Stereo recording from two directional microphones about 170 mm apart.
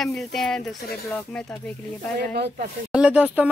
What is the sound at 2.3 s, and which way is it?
Speech, 65° right (ahead or behind).